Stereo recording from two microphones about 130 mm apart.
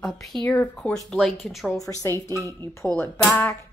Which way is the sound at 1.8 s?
25° left (ahead or behind).